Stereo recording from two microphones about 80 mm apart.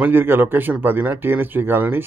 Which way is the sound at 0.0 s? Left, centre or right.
Right.